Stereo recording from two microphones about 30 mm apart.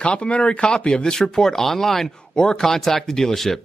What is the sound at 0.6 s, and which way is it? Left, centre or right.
Speech, left.